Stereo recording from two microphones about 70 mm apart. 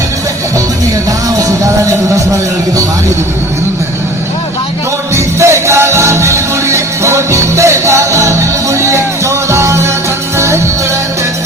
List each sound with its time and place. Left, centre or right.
1.4 s speech: right
5.1 s music: right